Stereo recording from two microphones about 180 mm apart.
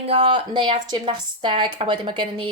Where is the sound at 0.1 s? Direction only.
30° right (ahead or behind).